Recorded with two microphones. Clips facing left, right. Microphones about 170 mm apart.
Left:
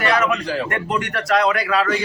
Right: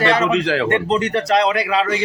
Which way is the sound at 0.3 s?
90° right.